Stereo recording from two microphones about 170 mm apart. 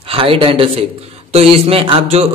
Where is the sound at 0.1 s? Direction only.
35° right (ahead or behind).